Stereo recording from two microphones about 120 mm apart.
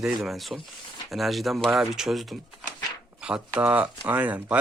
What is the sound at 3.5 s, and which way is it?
Speech, 10° right (ahead or behind).